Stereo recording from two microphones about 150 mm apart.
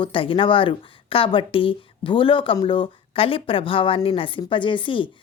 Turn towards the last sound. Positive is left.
turn(degrees=35)  # may be behind; listen again after turning